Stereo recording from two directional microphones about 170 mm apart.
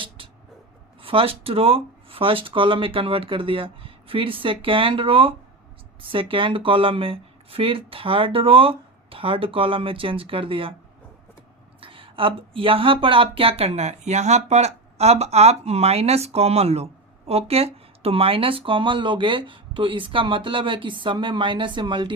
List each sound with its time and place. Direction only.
0.2 s vehicle: 30° right (ahead or behind)
1.0 s speech: 35° right (ahead or behind)
11.8 s speech: 30° right (ahead or behind)